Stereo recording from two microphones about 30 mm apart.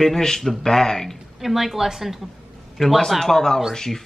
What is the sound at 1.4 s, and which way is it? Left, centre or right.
Speech, centre.